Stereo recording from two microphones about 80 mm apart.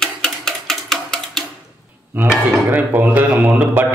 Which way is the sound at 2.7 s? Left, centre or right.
Right.